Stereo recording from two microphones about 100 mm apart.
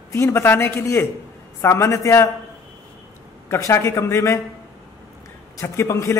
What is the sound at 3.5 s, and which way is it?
Speech, 25° left (ahead or behind).